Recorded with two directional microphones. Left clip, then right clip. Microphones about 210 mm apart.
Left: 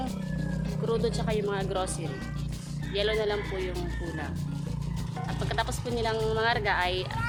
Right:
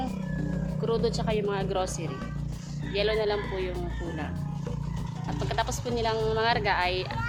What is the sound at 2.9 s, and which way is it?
Speech, 10° right (ahead or behind).